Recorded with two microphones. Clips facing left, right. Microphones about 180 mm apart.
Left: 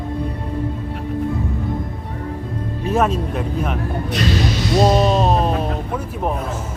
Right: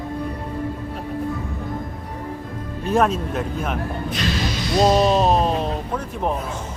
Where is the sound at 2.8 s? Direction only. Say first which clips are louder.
Even; centre (ahead or behind).